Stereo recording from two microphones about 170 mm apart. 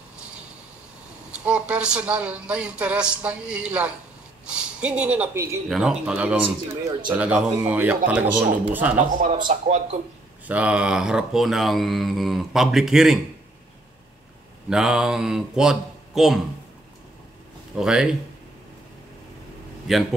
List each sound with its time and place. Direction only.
1.4 s speech: 5° right (ahead or behind)
5.7 s speech: 5° right (ahead or behind)
8.9 s speech: 50° right (ahead or behind)
10.4 s speech: 10° right (ahead or behind)
14.7 s speech: 5° right (ahead or behind)
17.7 s speech: 5° right (ahead or behind)
19.9 s speech: centre (ahead or behind)